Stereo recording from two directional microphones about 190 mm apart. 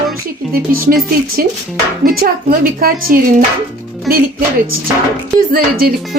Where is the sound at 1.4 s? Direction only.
50° right (ahead or behind).